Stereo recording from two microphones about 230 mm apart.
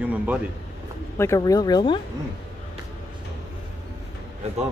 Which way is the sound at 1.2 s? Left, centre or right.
Centre.